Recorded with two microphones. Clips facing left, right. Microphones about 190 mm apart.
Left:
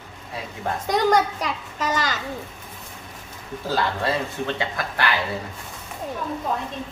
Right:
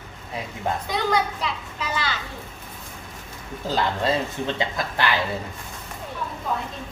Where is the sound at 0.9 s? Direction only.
45° left (ahead or behind).